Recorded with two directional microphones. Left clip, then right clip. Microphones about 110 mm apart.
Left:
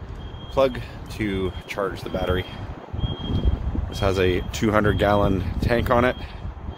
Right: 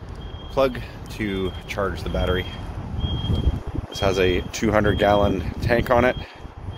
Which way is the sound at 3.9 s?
25° left (ahead or behind).